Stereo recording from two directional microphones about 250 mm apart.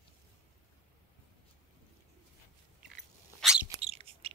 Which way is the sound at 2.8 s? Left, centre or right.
Centre.